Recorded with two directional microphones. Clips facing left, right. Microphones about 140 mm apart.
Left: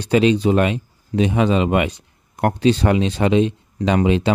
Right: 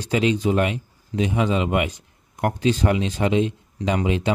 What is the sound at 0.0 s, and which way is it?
Speech, 70° left (ahead or behind).